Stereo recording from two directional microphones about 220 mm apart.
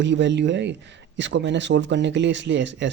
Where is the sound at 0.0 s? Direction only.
55° right (ahead or behind).